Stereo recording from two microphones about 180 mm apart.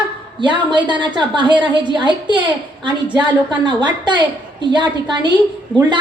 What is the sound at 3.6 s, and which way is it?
A woman's voice, 25° right (ahead or behind).